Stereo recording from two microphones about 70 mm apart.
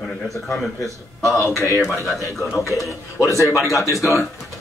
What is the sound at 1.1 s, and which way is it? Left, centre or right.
Speech, centre.